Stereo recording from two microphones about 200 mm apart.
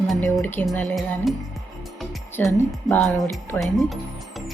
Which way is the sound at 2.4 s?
5° left (ahead or behind).